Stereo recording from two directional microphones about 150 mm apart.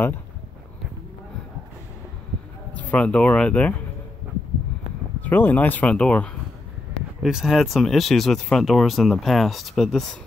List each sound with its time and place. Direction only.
2.7 s speech: 10° left (ahead or behind)
5.2 s speech: 10° left (ahead or behind)
7.2 s speech: 5° right (ahead or behind)